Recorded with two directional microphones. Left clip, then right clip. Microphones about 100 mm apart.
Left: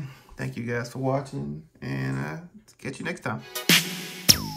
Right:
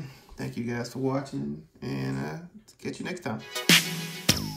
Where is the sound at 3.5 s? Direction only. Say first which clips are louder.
Even; centre (ahead or behind).